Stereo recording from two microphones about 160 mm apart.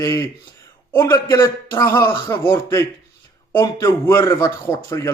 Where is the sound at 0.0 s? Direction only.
20° left (ahead or behind).